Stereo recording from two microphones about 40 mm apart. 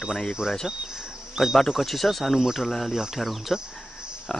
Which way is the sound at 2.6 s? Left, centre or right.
Centre.